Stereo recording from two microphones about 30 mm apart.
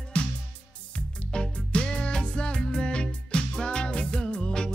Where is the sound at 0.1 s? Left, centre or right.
Left.